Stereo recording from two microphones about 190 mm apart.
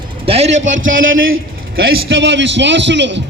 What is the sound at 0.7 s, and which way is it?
Speech, 90° right.